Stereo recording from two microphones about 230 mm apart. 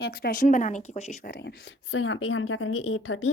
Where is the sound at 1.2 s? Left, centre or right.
Left.